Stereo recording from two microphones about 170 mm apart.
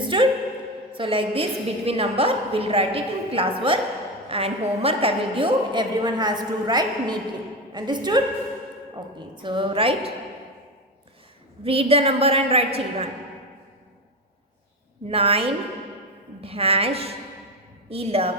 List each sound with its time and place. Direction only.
0.1 s a woman's voice: 30° right (ahead or behind)
11.6 s a woman's voice: 35° right (ahead or behind)
15.1 s a woman's voice: 35° right (ahead or behind)